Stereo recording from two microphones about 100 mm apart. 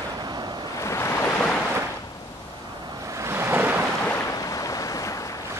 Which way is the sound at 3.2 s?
25° right (ahead or behind).